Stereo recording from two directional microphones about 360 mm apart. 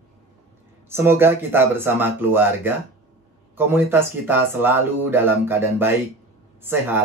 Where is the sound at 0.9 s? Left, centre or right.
Centre.